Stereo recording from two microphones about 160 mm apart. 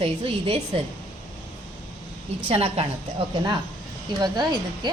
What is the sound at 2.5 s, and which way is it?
Speech, 40° right (ahead or behind).